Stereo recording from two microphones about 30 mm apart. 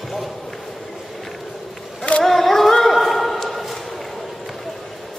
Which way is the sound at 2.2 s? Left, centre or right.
Centre.